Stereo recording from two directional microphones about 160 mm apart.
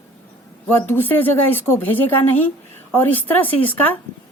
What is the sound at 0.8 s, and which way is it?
Speech, 15° left (ahead or behind).